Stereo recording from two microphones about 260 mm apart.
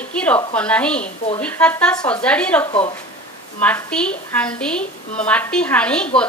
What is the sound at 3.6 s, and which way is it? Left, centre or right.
A woman's voice, centre.